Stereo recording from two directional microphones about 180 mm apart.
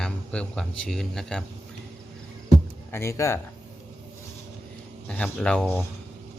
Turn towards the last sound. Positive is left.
turn(degrees=5)  # may be behind; listen again after turning